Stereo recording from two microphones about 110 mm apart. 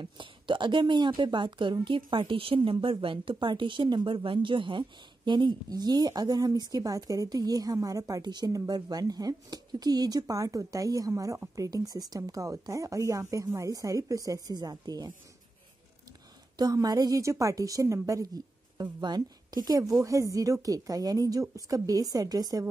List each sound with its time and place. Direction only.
0.0 s speech: 50° right (ahead or behind)
16.5 s speech: 35° right (ahead or behind)